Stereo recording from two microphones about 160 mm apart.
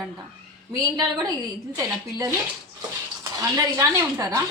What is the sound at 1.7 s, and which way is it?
Speech, 20° right (ahead or behind).